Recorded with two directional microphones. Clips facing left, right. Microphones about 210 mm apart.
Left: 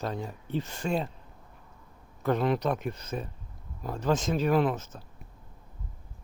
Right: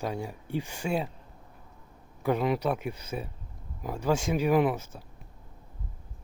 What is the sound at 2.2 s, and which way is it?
Speech, 10° right (ahead or behind).